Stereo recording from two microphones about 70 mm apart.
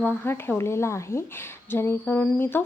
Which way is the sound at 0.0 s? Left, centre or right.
Left.